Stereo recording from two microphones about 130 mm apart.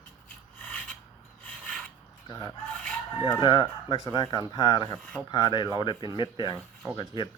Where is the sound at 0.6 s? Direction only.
10° left (ahead or behind).